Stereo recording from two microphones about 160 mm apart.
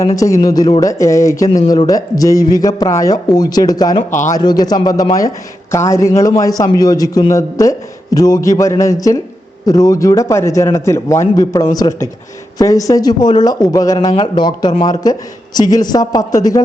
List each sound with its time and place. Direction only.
0.2 s a man's voice: 20° left (ahead or behind)
4.1 s speech: 50° left (ahead or behind)
4.4 s a man's voice: 25° left (ahead or behind)
14.0 s a man's voice: 35° left (ahead or behind)